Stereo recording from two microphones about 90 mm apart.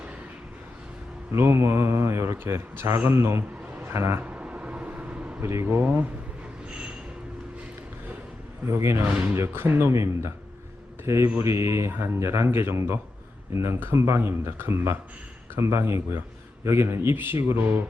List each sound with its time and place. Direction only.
1.3 s speech: 30° right (ahead or behind)
4.2 s vehicle: 15° right (ahead or behind)
5.4 s speech: 30° right (ahead or behind)
5.8 s speech: 15° right (ahead or behind)
6.7 s a sound: 15° right (ahead or behind)
8.6 s a man's voice: 30° right (ahead or behind)